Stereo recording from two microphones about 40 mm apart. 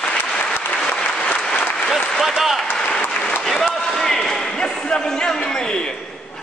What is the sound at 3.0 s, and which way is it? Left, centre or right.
Applause, left.